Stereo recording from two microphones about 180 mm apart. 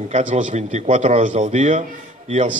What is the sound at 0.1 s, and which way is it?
A man's voice, 45° right (ahead or behind).